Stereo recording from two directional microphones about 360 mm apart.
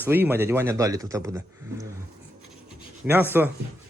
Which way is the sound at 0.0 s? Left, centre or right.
Centre.